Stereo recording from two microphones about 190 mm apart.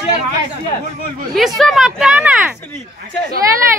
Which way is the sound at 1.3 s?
Centre (ahead or behind).